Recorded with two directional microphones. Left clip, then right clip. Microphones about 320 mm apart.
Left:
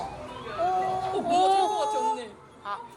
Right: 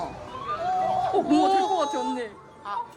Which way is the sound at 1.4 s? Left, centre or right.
Centre.